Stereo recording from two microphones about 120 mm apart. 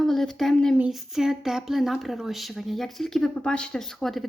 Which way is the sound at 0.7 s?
5° right (ahead or behind).